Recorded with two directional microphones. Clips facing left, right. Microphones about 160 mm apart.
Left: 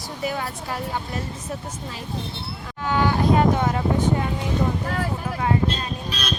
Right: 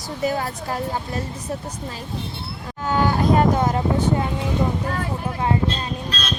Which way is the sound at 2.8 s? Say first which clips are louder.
Right 1 dB; 45° right (ahead or behind).